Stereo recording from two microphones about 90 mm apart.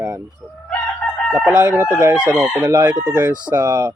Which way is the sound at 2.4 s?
40° right (ahead or behind).